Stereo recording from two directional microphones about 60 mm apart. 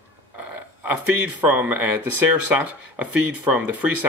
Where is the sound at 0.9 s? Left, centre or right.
Right.